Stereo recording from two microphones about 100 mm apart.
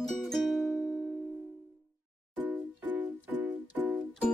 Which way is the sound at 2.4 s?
15° right (ahead or behind).